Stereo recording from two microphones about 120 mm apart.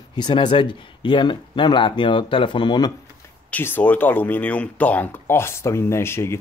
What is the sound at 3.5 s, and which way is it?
Speech, 15° left (ahead or behind).